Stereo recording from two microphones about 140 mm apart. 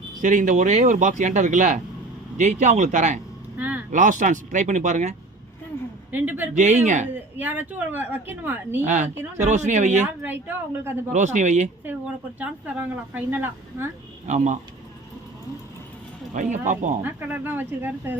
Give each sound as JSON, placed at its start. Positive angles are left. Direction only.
{"t": 0.2, "sound": "speech", "side_deg": -65}
{"t": 3.6, "sound": "vehicle", "side_deg": -10}
{"t": 3.9, "sound": "speech", "side_deg": -65}
{"t": 6.1, "sound": "a woman's voice", "side_deg": -15}
{"t": 6.5, "sound": "speech", "side_deg": -60}
{"t": 7.3, "sound": "a woman's voice", "side_deg": -10}
{"t": 8.8, "sound": "speech", "side_deg": -55}
{"t": 10.2, "sound": "a woman's voice", "side_deg": -15}
{"t": 11.1, "sound": "speech", "side_deg": -60}
{"t": 13.1, "sound": "a woman's voice", "side_deg": -15}
{"t": 14.3, "sound": "speech", "side_deg": -60}
{"t": 16.3, "sound": "speech", "side_deg": -60}
{"t": 17.0, "sound": "a woman's voice", "side_deg": -15}